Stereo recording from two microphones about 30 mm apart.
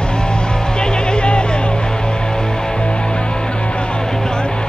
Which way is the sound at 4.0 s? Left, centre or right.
Centre.